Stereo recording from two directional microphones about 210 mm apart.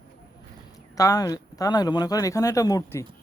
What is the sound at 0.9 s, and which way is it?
Speech, 15° left (ahead or behind).